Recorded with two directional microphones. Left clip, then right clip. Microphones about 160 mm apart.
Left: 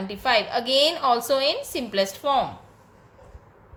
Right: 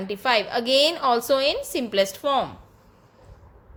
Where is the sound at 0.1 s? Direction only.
35° right (ahead or behind).